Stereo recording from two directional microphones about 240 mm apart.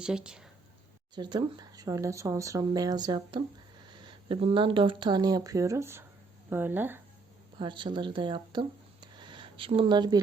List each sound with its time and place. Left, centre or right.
0.0 s speech: centre
1.1 s speech: centre
7.6 s speech: centre